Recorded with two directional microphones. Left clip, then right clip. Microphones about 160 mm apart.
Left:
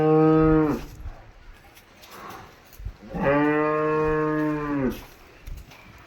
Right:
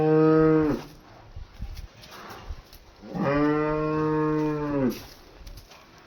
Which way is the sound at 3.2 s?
50° left (ahead or behind).